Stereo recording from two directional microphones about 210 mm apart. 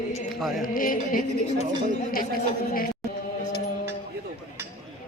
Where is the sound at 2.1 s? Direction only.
45° left (ahead or behind).